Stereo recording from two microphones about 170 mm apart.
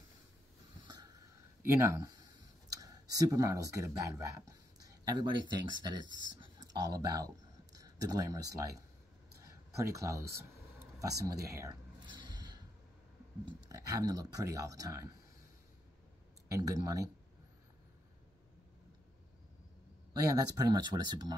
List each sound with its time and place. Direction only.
0.8 s a sound: 25° right (ahead or behind)
1.7 s clicking: 15° right (ahead or behind)
5.6 s speech: 25° right (ahead or behind)
9.4 s a sound: 20° right (ahead or behind)
10.8 s speech: 20° right (ahead or behind)
12.2 s a sound: 25° right (ahead or behind)
13.5 s speech: 20° right (ahead or behind)
16.4 s speech: 20° right (ahead or behind)
20.1 s speech: 20° right (ahead or behind)